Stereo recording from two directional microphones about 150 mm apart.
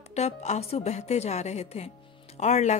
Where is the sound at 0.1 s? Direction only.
50° left (ahead or behind).